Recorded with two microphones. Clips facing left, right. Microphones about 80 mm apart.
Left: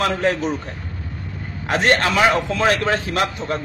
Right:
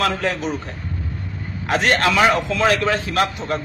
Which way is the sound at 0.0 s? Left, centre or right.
Left.